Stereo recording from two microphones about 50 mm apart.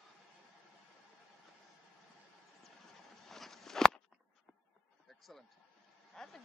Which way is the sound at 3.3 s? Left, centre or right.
Centre.